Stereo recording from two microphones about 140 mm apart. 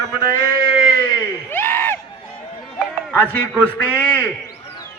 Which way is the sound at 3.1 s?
15° left (ahead or behind).